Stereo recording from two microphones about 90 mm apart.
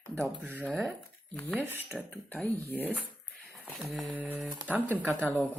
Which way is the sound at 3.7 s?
Centre (ahead or behind).